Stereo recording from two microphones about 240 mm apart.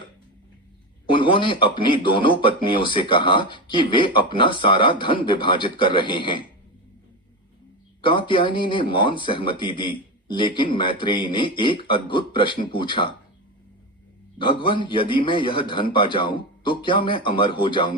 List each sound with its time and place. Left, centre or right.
1.1 s speech: left
8.0 s speech: left
14.3 s speech: left